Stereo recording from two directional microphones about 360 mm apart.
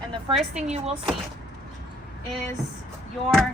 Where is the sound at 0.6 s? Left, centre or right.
Centre.